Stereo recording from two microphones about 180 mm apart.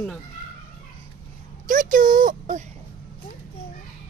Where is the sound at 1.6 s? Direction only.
50° right (ahead or behind).